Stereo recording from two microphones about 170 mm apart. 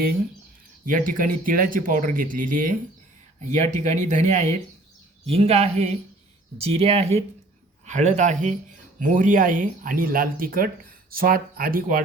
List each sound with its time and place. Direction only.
0.9 s speech: 50° right (ahead or behind)
3.5 s speech: 45° right (ahead or behind)